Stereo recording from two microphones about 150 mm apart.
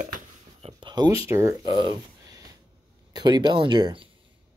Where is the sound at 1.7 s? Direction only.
30° right (ahead or behind).